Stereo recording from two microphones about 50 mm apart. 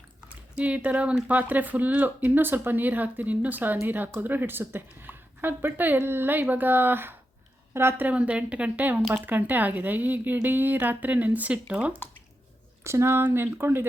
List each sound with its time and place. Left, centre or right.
0.5 s a woman's voice: right
8.0 s a woman's voice: right
12.8 s speech: right
13.2 s a woman's voice: right